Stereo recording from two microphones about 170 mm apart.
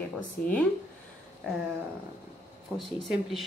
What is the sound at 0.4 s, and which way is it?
Speech, 55° left (ahead or behind).